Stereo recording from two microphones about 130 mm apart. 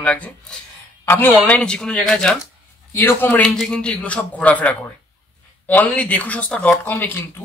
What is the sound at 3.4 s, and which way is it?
A man's voice, centre (ahead or behind).